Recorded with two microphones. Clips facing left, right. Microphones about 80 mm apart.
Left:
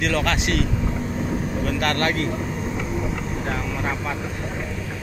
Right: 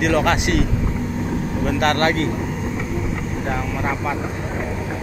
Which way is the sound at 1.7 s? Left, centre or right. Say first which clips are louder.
Right 5 dB; right.